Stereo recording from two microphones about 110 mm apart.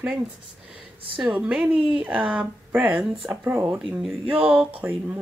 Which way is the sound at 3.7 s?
5° right (ahead or behind).